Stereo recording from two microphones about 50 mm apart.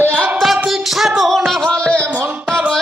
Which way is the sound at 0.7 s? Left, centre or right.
Centre.